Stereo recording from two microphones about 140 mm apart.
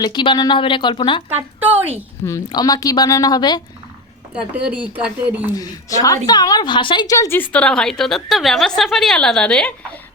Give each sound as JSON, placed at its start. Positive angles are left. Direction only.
{"t": 0.0, "sound": "speech", "side_deg": 35}
{"t": 1.5, "sound": "a sound", "side_deg": -10}
{"t": 2.2, "sound": "a woman's voice", "side_deg": 25}
{"t": 4.5, "sound": "speech", "side_deg": -10}
{"t": 5.5, "sound": "a woman's voice", "side_deg": 25}
{"t": 7.5, "sound": "a woman's voice", "side_deg": 5}